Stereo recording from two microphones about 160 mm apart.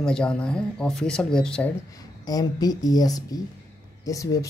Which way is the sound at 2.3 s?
25° left (ahead or behind).